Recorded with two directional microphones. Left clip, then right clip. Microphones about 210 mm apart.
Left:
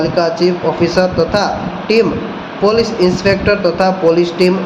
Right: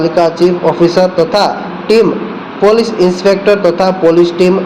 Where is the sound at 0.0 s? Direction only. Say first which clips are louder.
Right 4 dB; 20° right (ahead or behind).